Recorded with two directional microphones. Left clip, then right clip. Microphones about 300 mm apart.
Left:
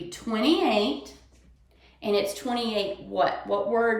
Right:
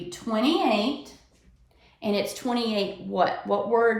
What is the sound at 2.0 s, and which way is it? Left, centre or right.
Speech, centre.